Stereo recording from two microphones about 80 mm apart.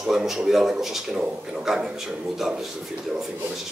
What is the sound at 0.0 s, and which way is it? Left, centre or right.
Speech, centre.